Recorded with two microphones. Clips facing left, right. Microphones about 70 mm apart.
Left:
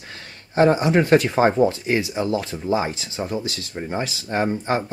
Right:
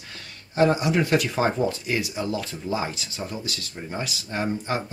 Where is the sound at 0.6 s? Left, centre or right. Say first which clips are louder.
Left 4 dB; left.